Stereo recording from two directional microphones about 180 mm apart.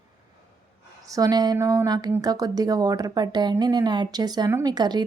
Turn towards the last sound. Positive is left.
turn(degrees=-25)  # may be behind; listen again after turning